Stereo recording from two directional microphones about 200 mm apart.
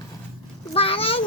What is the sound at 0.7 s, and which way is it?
Speech, 25° left (ahead or behind).